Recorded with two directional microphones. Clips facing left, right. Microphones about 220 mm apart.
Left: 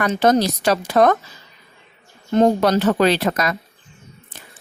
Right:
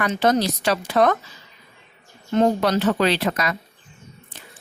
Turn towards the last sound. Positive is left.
turn(degrees=45)  # may be behind; listen again after turning